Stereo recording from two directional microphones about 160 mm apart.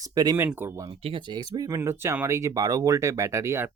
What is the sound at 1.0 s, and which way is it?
Speech, 30° right (ahead or behind).